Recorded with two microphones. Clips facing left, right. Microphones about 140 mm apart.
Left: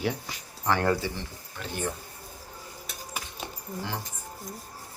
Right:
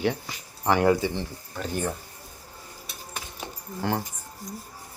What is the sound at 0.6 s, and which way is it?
Speech, 15° right (ahead or behind).